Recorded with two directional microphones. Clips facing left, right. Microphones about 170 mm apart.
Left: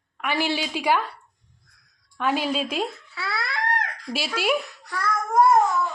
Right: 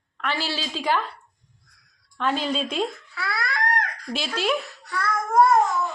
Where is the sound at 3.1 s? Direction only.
25° left (ahead or behind).